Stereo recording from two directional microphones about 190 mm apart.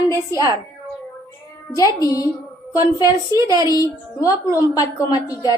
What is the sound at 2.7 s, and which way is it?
Speech, 15° right (ahead or behind).